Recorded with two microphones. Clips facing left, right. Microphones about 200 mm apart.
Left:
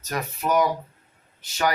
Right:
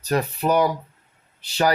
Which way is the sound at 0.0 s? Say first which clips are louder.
Right 6 dB; 30° right (ahead or behind).